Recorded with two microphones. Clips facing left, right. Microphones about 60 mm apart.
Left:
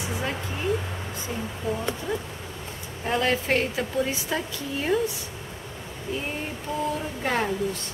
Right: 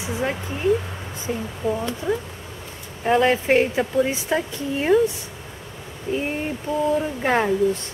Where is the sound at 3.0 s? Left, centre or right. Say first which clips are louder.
Right 6 dB; centre.